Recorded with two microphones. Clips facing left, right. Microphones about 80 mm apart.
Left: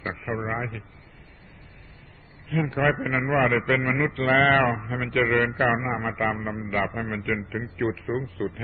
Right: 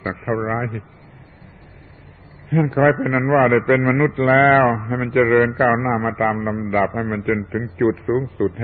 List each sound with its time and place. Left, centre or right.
0.0 s a man's voice: right
2.7 s a man's voice: right